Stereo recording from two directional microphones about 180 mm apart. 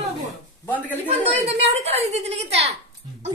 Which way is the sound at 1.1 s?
35° right (ahead or behind).